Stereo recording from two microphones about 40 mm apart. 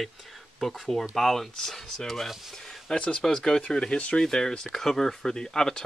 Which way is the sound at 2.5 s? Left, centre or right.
Centre.